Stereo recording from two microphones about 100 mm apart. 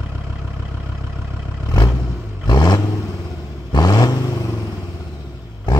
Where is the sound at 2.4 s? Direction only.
45° left (ahead or behind).